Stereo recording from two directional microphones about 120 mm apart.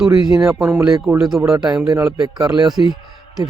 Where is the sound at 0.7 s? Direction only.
20° right (ahead or behind).